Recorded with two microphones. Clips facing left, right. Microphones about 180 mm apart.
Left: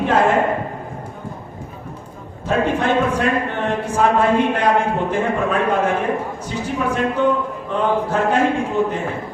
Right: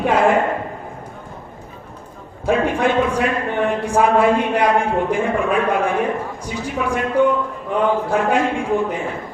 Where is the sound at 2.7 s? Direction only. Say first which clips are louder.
Even; 10° right (ahead or behind).